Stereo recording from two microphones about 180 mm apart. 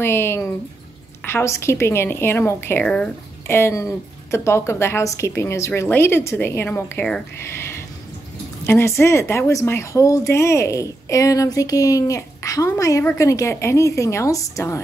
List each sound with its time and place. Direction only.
0.0 s a woman's voice: 15° left (ahead or behind)